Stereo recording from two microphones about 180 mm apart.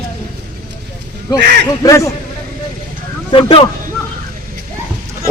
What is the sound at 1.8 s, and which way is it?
Speech, 15° left (ahead or behind).